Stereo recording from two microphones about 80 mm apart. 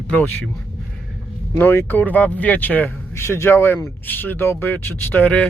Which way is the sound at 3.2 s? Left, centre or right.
Left.